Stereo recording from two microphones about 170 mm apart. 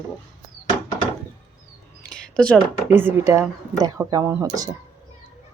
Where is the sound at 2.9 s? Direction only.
15° right (ahead or behind).